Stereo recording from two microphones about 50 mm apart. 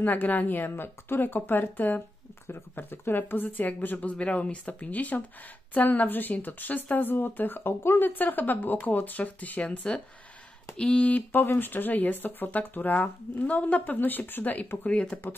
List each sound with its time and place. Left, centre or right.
0.0 s speech: left
8.0 s speech: left
11.3 s speech: left
13.9 s speech: left